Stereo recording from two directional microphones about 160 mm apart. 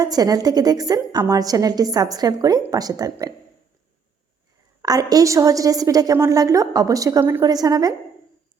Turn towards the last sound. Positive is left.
turn(degrees=-25)  # may be behind; listen again after turning